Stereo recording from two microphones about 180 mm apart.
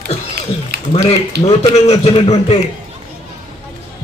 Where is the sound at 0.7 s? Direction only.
60° right (ahead or behind).